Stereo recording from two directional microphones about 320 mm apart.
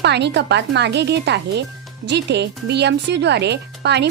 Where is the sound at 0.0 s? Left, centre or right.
Right.